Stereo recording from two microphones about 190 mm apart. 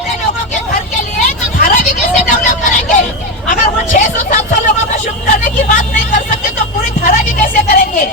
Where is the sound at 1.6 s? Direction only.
40° left (ahead or behind).